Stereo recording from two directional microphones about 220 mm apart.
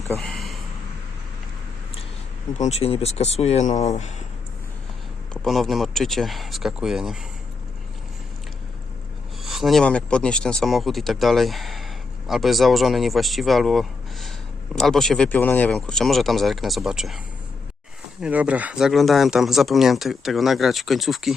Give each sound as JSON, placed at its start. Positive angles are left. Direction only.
{"t": 0.2, "sound": "a sound", "side_deg": 0}
{"t": 2.6, "sound": "speech", "side_deg": 30}
{"t": 5.3, "sound": "speech", "side_deg": 0}
{"t": 9.4, "sound": "speech", "side_deg": 0}
{"t": 18.2, "sound": "speech", "side_deg": -5}